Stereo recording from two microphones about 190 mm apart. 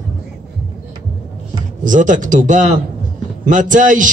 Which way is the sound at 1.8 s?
45° right (ahead or behind).